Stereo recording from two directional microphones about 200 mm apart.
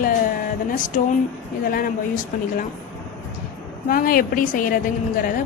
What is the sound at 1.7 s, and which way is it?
Speech, 45° left (ahead or behind).